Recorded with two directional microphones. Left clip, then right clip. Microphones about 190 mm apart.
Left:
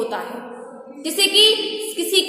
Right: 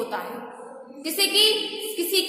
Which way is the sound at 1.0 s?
15° left (ahead or behind).